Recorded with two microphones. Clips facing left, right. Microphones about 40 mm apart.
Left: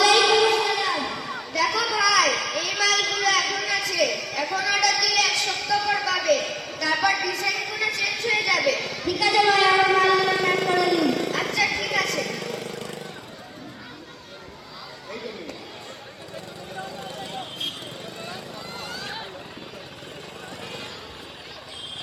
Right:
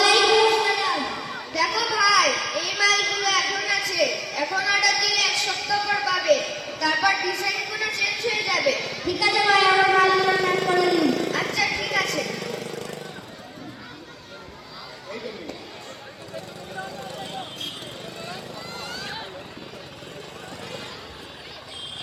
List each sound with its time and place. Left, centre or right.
0.0 s a sound: centre
11.1 s music: centre
12.6 s vehicle: left
18.8 s vehicle: centre